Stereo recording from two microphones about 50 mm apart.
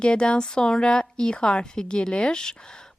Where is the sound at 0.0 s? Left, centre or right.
Centre.